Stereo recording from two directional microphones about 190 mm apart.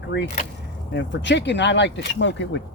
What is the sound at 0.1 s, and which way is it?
Speech, 65° left (ahead or behind).